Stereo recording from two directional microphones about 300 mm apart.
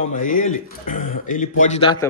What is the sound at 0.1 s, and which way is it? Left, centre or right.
Speech, left.